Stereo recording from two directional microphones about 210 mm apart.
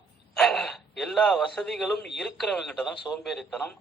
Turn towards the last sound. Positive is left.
turn(degrees=5)  # may be behind; listen again after turning